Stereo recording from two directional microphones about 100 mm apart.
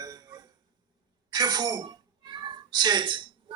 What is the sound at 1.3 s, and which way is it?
A child's voice, 40° right (ahead or behind).